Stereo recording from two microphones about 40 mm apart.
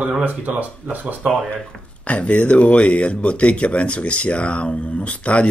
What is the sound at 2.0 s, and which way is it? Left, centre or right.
Speech, left.